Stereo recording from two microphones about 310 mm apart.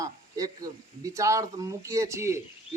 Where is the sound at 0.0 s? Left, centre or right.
Centre.